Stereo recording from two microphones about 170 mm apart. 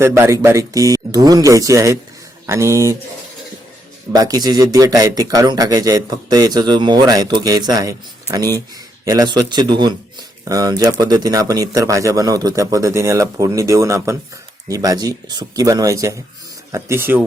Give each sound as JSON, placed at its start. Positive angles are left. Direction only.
{"t": 0.0, "sound": "speech", "side_deg": -15}
{"t": 4.1, "sound": "speech", "side_deg": -20}